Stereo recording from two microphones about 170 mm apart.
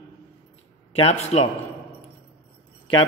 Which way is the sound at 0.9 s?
40° left (ahead or behind).